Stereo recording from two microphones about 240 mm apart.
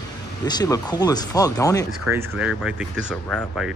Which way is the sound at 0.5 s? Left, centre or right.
Centre.